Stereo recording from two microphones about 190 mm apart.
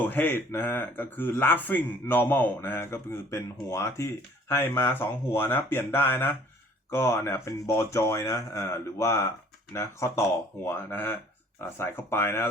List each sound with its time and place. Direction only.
0.0 s speech: 10° left (ahead or behind)